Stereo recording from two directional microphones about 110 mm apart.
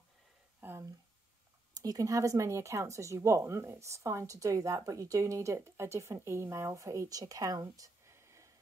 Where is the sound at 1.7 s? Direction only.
35° right (ahead or behind).